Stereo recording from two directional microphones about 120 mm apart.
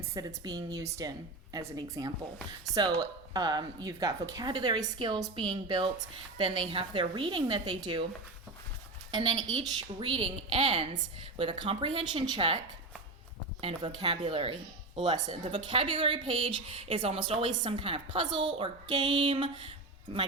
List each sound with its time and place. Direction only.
0.1 s a woman's voice: 30° right (ahead or behind)
9.1 s speech: 40° right (ahead or behind)
9.6 s a woman's voice: 50° right (ahead or behind)
13.6 s a woman's voice: 55° right (ahead or behind)